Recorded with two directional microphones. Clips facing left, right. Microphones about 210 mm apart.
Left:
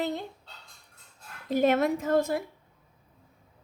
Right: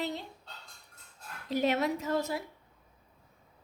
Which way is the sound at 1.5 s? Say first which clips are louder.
Left 5 dB; 50° left (ahead or behind).